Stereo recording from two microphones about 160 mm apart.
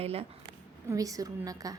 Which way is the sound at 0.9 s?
20° right (ahead or behind).